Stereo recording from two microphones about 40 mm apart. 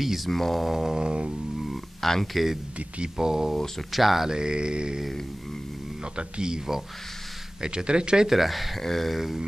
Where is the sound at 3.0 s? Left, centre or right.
Centre.